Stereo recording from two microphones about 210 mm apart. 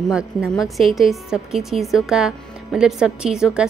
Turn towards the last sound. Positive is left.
turn(degrees=-5)  # may be behind; listen again after turning